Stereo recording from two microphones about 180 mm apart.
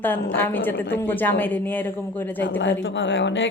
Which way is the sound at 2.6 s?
90° left.